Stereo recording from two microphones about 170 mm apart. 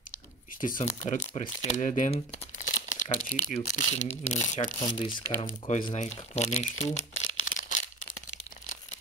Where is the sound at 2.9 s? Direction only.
50° left (ahead or behind).